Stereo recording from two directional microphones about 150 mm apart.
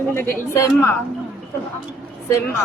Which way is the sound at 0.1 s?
15° left (ahead or behind).